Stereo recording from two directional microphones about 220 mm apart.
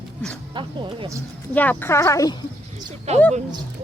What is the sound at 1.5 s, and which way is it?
Speech, 5° left (ahead or behind).